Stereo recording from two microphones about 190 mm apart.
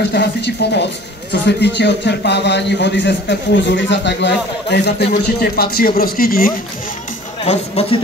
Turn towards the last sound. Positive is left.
turn(degrees=30)  # may be behind; listen again after turning